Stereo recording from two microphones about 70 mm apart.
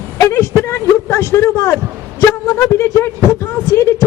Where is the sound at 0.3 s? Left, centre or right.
Left.